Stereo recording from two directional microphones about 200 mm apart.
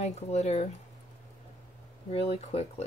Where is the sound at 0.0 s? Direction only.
35° left (ahead or behind).